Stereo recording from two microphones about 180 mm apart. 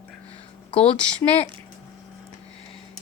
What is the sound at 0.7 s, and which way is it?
Speech, 30° left (ahead or behind).